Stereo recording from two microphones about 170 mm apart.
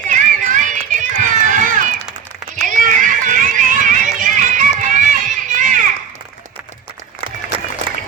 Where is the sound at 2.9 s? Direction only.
50° right (ahead or behind).